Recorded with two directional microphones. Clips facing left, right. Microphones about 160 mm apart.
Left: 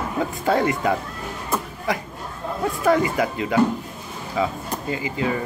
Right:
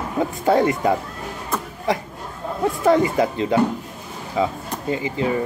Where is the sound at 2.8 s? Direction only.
25° right (ahead or behind).